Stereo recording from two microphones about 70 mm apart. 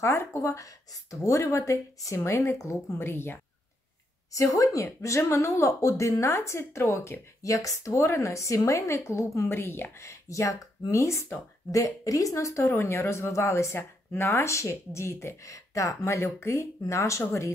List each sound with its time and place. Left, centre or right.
0.0 s speech: left
4.3 s speech: left
9.6 s speech: left
10.0 s speech: left
11.7 s speech: left